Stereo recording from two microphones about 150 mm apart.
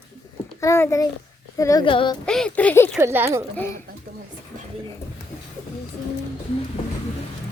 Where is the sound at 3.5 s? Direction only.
15° left (ahead or behind).